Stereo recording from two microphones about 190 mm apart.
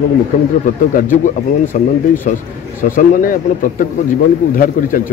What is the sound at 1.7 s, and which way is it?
Speech, 40° left (ahead or behind).